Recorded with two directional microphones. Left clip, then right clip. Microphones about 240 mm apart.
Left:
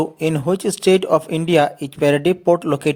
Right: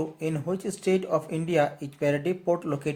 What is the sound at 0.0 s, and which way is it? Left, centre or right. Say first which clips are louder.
Speech: left 11 dB; left.